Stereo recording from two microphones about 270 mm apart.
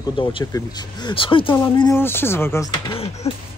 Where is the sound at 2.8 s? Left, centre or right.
Left.